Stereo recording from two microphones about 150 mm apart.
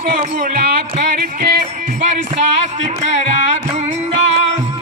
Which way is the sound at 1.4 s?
90° right.